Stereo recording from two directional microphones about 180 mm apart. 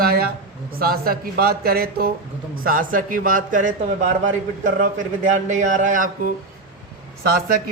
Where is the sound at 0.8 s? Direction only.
55° right (ahead or behind).